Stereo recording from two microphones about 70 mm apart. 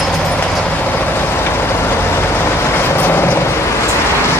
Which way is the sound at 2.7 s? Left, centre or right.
Left.